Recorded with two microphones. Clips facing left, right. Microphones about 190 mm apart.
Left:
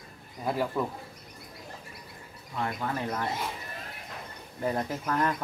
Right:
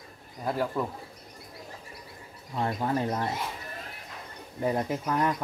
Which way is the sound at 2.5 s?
25° right (ahead or behind).